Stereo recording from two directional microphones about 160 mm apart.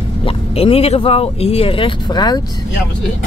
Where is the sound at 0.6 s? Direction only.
40° left (ahead or behind).